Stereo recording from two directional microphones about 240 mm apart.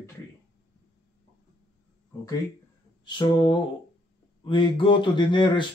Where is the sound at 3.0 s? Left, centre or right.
Centre.